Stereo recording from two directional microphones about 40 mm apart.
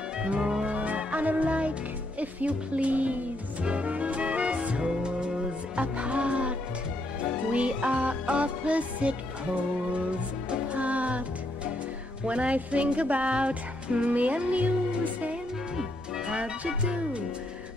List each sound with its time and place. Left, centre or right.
0.4 s music: centre
0.7 s music: right
7.5 s music: right
10.7 s music: right
15.7 s music: centre
16.3 s music: right